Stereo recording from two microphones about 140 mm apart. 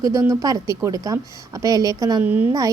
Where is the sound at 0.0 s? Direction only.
25° right (ahead or behind).